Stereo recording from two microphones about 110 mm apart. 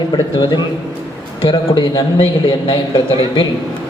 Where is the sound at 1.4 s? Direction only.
45° left (ahead or behind).